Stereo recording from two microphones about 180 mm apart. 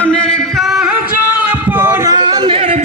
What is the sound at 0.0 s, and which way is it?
Music, 5° left (ahead or behind).